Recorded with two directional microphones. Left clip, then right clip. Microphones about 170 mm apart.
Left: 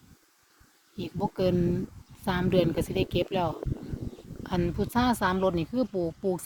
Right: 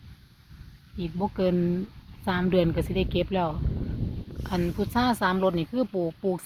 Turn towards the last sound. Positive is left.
turn(degrees=-5)  # may be behind; listen again after turning